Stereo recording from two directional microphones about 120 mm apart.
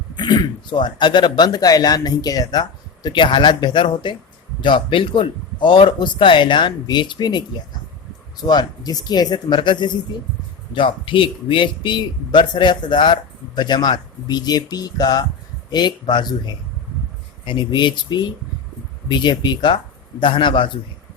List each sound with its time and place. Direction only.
0.2 s speech: 35° left (ahead or behind)
17.4 s speech: 40° left (ahead or behind)